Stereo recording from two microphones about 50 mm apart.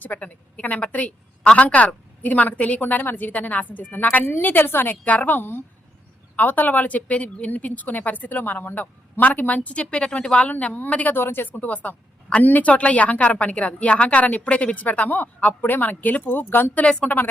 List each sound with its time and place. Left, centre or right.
0.0 s a woman's voice: left
5.0 s a woman's voice: left
11.1 s speech: left
16.7 s a woman's voice: left